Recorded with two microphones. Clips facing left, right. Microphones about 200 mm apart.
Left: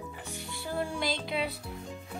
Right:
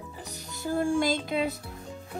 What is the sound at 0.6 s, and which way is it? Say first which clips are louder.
Speech: right 8 dB; 45° right (ahead or behind).